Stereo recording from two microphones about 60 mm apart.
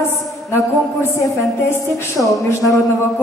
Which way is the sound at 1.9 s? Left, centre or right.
Left.